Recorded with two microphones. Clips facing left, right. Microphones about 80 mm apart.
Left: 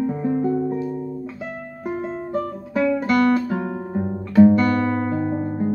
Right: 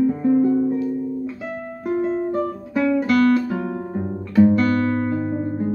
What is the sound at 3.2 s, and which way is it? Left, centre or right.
Guitar, centre.